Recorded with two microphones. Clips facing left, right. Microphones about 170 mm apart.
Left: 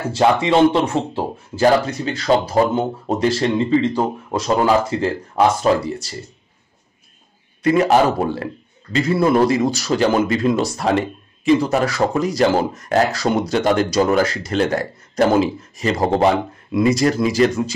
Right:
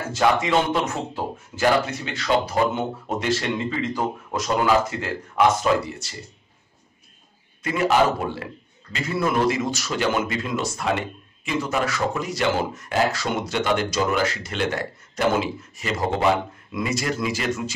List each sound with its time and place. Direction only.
0.1 s speech: 30° left (ahead or behind)
7.6 s speech: 40° left (ahead or behind)